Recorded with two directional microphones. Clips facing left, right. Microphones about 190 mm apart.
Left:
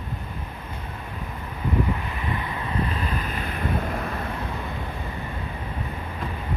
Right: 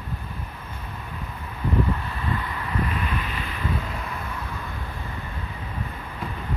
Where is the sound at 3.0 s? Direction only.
40° left (ahead or behind).